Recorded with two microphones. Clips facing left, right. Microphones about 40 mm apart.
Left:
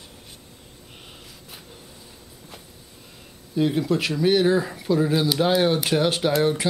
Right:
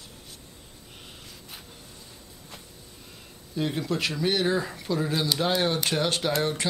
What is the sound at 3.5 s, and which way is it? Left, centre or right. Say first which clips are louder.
Speech: left 6 dB; centre.